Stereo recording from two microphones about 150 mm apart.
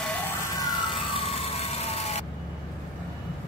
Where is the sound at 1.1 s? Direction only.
40° left (ahead or behind).